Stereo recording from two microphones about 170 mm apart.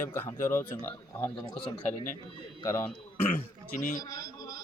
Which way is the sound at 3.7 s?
50° left (ahead or behind).